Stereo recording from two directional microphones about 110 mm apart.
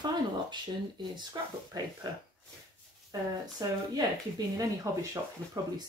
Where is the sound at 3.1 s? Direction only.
35° right (ahead or behind).